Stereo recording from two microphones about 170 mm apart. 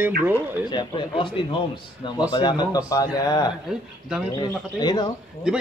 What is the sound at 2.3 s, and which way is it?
Speech, 25° left (ahead or behind).